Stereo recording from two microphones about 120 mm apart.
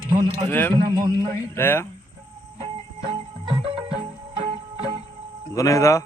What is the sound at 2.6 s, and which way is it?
Music, 50° right (ahead or behind).